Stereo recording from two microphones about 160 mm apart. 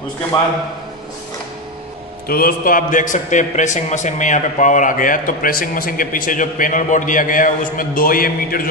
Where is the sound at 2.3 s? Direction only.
65° left (ahead or behind).